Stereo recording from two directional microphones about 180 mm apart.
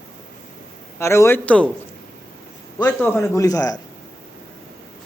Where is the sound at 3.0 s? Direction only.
10° left (ahead or behind).